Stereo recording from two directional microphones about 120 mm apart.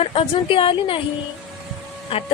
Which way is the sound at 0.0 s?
50° left (ahead or behind).